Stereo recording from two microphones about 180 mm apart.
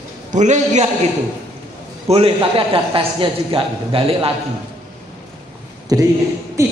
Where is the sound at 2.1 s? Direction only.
30° right (ahead or behind).